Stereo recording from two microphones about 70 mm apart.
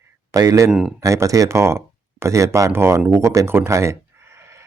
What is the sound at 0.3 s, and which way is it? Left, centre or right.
Speech, right.